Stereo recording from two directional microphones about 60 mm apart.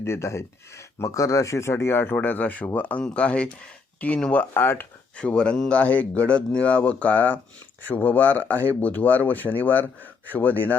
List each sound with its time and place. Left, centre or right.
0.0 s speech: left
0.9 s speech: left
2.1 s speech: left
4.5 s speech: left
5.1 s speech: centre